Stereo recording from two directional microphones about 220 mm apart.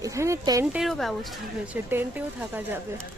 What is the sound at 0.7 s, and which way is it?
Speech, centre (ahead or behind).